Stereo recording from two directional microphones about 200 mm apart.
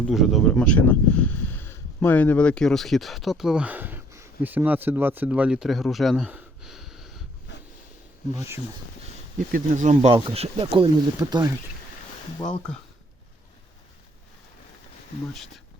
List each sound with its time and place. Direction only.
0.0 s speech: centre (ahead or behind)
7.5 s a sound: 60° left (ahead or behind)
9.5 s speech: 40° right (ahead or behind); by 11.5 s 20° right (ahead or behind)
15.3 s speech: centre (ahead or behind)